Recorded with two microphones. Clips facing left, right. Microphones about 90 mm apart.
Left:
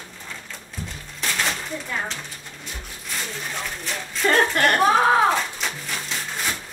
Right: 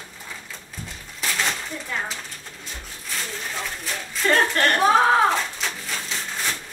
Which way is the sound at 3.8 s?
Centre (ahead or behind).